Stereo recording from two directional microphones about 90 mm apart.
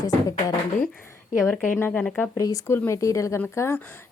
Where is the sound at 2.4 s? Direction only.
40° left (ahead or behind).